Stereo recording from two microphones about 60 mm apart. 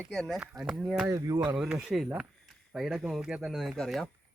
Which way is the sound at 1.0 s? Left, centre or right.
Right.